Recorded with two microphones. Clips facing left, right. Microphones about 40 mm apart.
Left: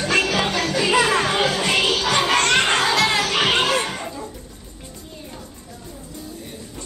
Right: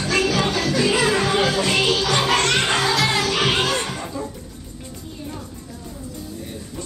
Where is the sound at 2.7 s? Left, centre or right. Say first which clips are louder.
Left 1 dB; centre.